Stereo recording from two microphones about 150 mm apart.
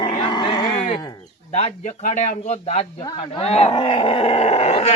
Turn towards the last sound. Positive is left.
turn(degrees=45)  # may be behind; listen again after turning